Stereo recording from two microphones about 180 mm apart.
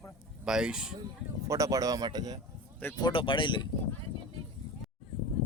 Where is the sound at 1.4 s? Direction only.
20° right (ahead or behind).